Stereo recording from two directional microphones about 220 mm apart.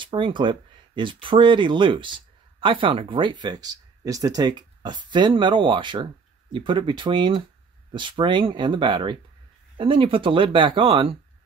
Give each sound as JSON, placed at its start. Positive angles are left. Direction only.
{"t": 0.0, "sound": "speech", "side_deg": -20}